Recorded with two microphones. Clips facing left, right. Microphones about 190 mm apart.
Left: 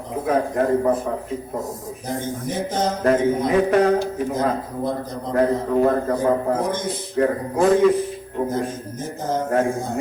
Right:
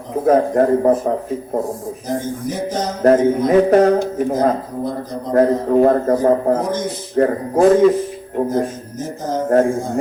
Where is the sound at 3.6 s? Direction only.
45° right (ahead or behind).